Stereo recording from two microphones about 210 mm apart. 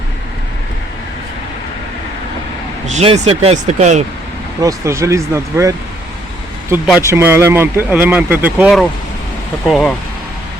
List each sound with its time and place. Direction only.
2.8 s speech: 30° right (ahead or behind)
4.6 s speech: 15° right (ahead or behind)
7.0 s speech: 10° right (ahead or behind)